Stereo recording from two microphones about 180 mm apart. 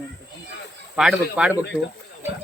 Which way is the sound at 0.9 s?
5° right (ahead or behind).